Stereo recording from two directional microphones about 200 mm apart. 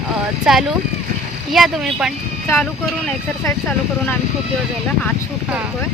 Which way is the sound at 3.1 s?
10° left (ahead or behind).